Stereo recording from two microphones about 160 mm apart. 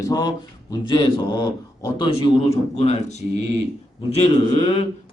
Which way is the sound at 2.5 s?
40° left (ahead or behind).